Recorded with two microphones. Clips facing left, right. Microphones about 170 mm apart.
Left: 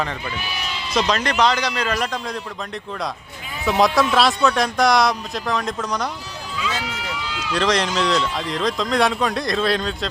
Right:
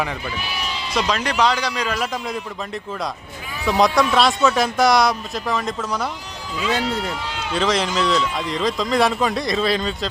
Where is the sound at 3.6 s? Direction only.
Centre (ahead or behind).